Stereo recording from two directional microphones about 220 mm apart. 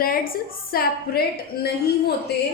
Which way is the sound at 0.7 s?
45° left (ahead or behind).